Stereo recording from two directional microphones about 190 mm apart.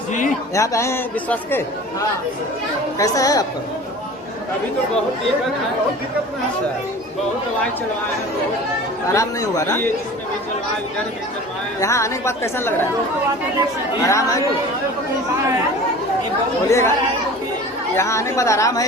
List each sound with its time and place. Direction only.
0.5 s a man's voice: 15° left (ahead or behind)
9.1 s a man's voice: 15° left (ahead or behind)
11.8 s a man's voice: 15° left (ahead or behind)
14.1 s a man's voice: 15° left (ahead or behind)
16.6 s a man's voice: 15° left (ahead or behind)
17.9 s a man's voice: 15° left (ahead or behind)